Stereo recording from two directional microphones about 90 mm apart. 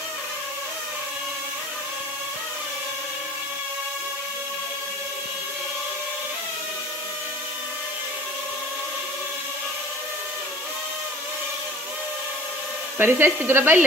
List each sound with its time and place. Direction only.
13.0 s speech: 25° right (ahead or behind)